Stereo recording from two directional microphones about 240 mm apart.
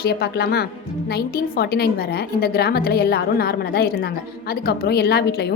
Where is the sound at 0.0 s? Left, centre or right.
Left.